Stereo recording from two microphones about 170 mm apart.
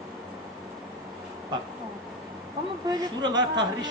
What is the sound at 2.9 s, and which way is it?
Speech, 25° right (ahead or behind).